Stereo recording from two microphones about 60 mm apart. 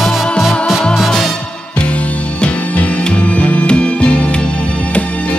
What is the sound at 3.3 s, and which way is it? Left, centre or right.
Music, left.